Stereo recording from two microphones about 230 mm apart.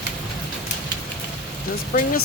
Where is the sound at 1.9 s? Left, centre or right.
Left.